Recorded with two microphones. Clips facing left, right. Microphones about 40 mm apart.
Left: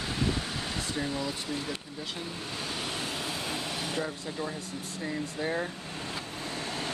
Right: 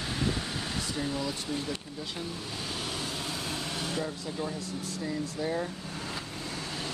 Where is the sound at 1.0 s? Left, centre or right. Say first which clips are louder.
Even; centre.